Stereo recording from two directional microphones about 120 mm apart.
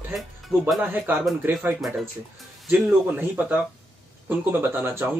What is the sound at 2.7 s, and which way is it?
A man's voice, 10° right (ahead or behind).